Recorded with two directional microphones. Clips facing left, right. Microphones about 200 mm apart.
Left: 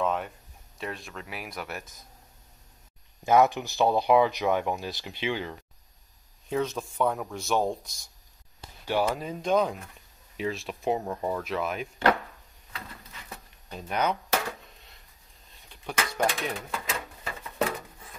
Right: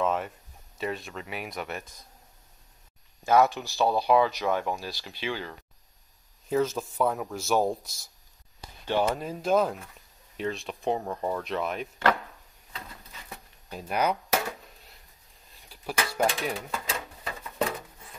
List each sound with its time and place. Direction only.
0.0 s speech: centre (ahead or behind)
3.3 s speech: 15° left (ahead or behind)
6.5 s speech: centre (ahead or behind)
13.7 s speech: 5° right (ahead or behind)
15.7 s speech: 5° right (ahead or behind)
16.9 s a sound: centre (ahead or behind)